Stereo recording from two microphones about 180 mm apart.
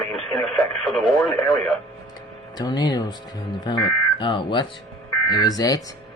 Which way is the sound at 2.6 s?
20° left (ahead or behind).